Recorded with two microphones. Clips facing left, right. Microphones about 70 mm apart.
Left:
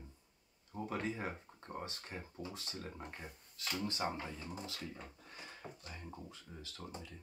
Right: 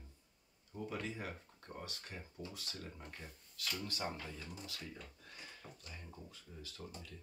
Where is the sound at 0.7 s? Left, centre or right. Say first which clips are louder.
Left 3 dB; left.